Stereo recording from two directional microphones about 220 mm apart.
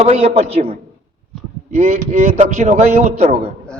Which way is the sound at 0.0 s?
30° right (ahead or behind).